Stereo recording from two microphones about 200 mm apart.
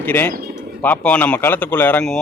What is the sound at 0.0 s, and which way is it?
A man's voice, 10° left (ahead or behind).